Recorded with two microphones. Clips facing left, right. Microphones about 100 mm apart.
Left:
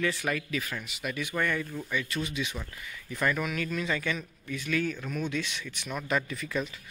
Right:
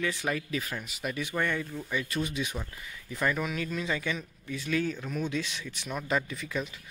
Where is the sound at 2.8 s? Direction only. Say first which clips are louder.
Left 1 dB; 25° right (ahead or behind).